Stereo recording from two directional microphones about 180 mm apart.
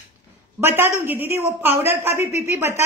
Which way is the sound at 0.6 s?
15° right (ahead or behind).